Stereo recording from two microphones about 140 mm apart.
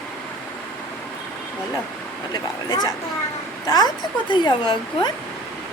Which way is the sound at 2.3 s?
30° left (ahead or behind).